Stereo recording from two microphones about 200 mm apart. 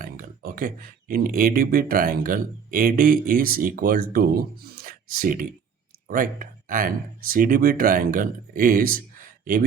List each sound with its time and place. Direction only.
0.0 s speech: 45° right (ahead or behind)